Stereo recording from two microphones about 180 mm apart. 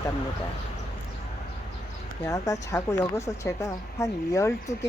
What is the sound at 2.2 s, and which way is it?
A woman's voice, 20° left (ahead or behind).